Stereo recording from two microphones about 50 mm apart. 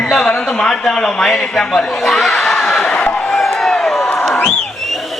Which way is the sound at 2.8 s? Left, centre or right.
Centre.